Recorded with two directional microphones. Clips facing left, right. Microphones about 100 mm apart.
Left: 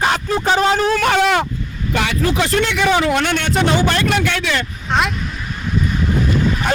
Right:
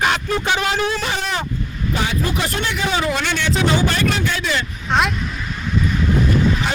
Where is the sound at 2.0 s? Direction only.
80° left.